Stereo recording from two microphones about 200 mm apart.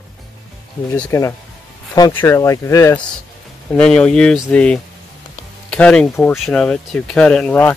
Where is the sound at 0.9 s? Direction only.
15° left (ahead or behind).